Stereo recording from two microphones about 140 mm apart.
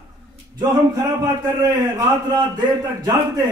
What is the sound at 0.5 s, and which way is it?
A man's voice, 25° right (ahead or behind).